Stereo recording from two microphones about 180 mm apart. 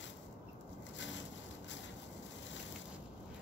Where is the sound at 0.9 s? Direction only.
90° left.